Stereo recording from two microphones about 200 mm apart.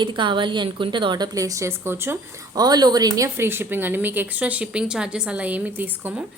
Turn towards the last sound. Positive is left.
turn(degrees=-10)  # may be behind; listen again after turning